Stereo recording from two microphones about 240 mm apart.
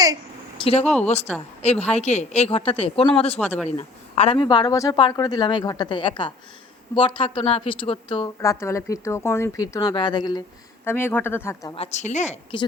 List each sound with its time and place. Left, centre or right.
0.6 s speech: left
3.3 s speech: centre
3.8 s speech: left; by 11.7 s centre
11.7 s speech: left